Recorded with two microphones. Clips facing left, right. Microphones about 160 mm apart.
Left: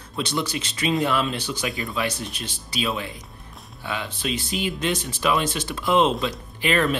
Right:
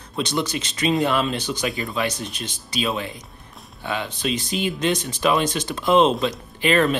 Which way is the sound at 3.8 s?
25° right (ahead or behind).